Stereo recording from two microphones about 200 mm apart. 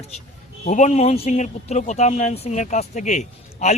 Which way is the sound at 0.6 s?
35° left (ahead or behind).